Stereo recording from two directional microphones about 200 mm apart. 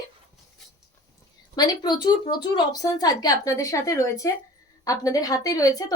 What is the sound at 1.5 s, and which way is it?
A woman's voice, 20° left (ahead or behind).